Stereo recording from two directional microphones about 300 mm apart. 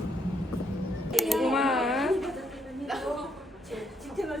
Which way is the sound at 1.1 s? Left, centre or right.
Centre.